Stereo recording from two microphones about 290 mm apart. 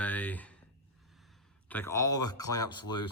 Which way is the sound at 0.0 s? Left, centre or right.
Centre.